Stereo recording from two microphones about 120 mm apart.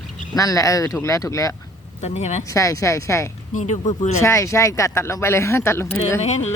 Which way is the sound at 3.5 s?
75° left (ahead or behind).